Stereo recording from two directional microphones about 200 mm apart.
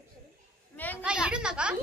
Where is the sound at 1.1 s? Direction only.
5° right (ahead or behind).